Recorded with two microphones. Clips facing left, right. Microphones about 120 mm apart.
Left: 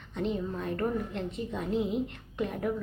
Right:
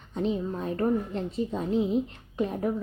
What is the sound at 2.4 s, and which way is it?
Speech, 30° right (ahead or behind).